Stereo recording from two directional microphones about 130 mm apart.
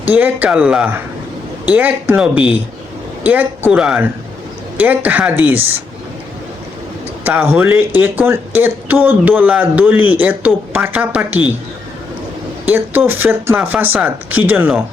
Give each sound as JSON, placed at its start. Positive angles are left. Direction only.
{"t": 0.0, "sound": "speech", "side_deg": -15}
{"t": 7.3, "sound": "speech", "side_deg": -15}
{"t": 12.6, "sound": "speech", "side_deg": -15}